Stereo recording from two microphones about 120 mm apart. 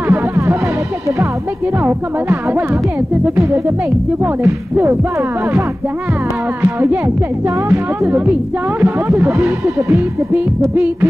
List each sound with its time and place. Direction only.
0.1 s music: 25° right (ahead or behind)
1.8 s speech: 20° right (ahead or behind)
4.2 s speech: 20° right (ahead or behind)
7.4 s speech: 20° right (ahead or behind)